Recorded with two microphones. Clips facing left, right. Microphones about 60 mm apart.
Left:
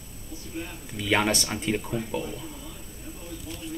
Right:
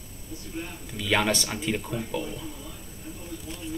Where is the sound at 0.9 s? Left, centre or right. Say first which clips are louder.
Left 1 dB; centre.